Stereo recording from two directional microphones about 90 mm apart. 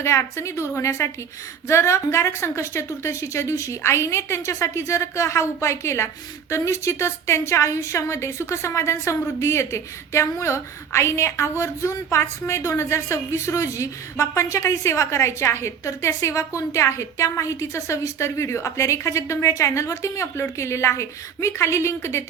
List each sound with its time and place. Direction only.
0.0 s a woman's voice: 30° left (ahead or behind)